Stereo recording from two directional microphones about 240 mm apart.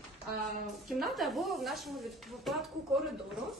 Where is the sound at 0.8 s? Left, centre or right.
Centre.